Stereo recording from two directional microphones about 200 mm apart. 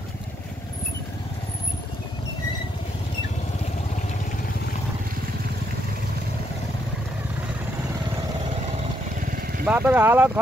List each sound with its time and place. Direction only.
9.2 s vehicle: 45° right (ahead or behind)
9.7 s speech: 10° right (ahead or behind)